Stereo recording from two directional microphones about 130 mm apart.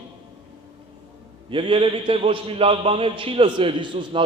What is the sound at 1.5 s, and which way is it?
A man's voice, 40° right (ahead or behind).